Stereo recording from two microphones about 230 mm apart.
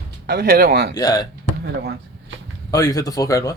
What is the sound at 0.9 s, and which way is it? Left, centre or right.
Speech, centre.